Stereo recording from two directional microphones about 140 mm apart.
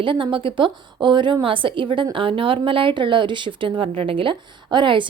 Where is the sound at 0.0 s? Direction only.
35° right (ahead or behind).